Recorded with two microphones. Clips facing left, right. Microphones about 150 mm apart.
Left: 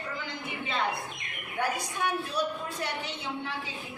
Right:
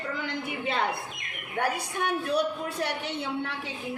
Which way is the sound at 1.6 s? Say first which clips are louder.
Right 2 dB; 60° right (ahead or behind).